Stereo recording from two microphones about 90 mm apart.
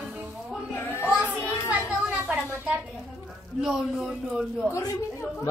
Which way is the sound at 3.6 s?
5° right (ahead or behind).